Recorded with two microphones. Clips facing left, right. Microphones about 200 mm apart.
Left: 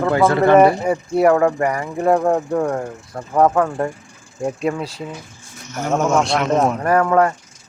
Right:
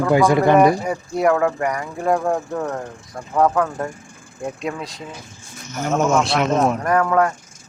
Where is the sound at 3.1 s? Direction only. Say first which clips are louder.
Left 2 dB; 25° left (ahead or behind).